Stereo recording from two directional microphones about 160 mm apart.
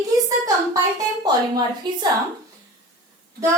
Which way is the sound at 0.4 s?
20° right (ahead or behind).